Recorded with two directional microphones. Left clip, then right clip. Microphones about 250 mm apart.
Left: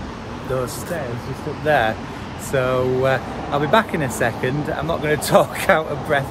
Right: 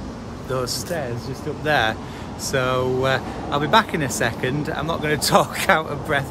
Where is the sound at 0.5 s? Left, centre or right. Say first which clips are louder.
Even; centre.